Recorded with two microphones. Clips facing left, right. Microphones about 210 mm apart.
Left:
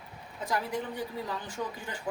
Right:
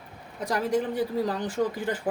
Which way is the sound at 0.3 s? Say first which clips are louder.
Right 7 dB; 90° right.